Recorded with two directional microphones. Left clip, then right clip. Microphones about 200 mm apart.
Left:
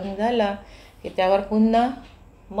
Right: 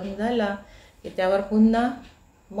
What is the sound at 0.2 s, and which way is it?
A woman's voice, 5° left (ahead or behind).